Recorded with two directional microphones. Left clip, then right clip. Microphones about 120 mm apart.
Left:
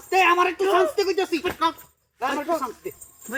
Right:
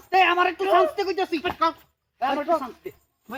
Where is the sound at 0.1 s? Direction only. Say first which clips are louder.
Left 1 dB; 40° right (ahead or behind).